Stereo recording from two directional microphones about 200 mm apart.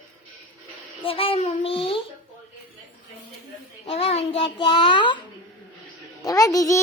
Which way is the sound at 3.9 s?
30° left (ahead or behind).